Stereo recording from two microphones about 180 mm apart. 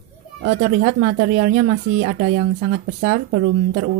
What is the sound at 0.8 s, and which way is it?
Speech, 60° right (ahead or behind).